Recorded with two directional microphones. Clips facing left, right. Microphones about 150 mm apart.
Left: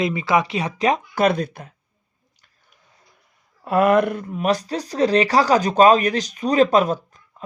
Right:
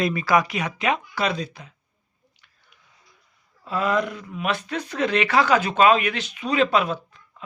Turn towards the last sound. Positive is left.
turn(degrees=40)  # may be behind; listen again after turning